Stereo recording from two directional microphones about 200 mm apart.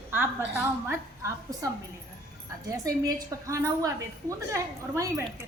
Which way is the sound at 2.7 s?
15° right (ahead or behind).